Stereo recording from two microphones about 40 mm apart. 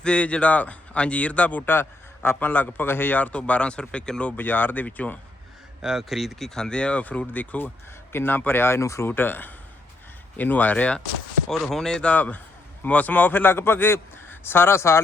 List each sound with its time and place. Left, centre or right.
0.0 s speech: left
1.6 s a man's voice: left
2.3 s a man's voice: left
3.3 s speech: left
4.4 s a man's voice: left
5.8 s speech: centre
6.4 s speech: centre
7.0 s speech: left
8.1 s a man's voice: left
11.4 s speech: centre
12.1 s a man's voice: left